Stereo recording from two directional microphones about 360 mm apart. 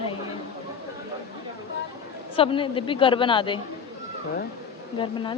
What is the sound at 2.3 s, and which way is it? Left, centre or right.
A woman's voice, centre.